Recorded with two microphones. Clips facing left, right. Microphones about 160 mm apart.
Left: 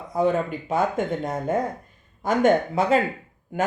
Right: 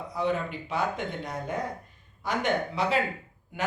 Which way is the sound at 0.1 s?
45° left (ahead or behind).